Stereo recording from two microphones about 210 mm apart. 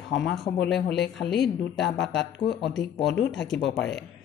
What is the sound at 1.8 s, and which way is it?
Speech, 55° left (ahead or behind).